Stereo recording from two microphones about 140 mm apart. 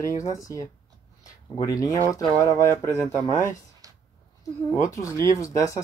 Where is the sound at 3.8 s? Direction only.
25° right (ahead or behind).